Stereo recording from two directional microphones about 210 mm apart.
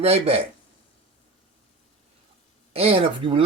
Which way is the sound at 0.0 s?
30° right (ahead or behind).